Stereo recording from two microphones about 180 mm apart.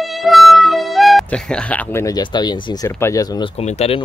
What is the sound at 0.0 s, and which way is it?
Speech, centre (ahead or behind).